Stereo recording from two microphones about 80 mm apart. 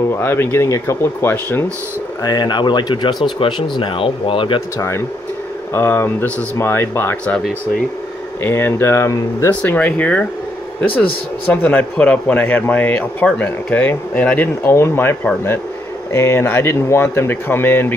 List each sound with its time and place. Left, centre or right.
0.1 s speech: left
2.2 s speech: left
3.3 s speech: left
4.7 s a man's voice: left
8.4 s a man's voice: left
9.6 s a man's voice: centre